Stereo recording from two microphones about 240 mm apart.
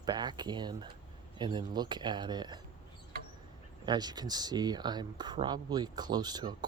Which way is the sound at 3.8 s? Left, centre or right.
Centre.